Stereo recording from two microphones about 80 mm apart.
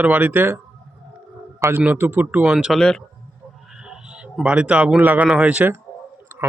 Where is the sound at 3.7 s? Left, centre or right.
Centre.